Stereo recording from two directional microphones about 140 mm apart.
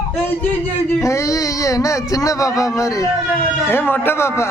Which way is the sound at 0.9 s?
20° left (ahead or behind).